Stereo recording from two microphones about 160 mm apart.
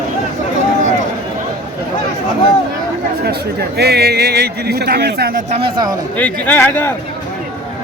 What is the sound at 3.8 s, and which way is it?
A man's voice, 90° right.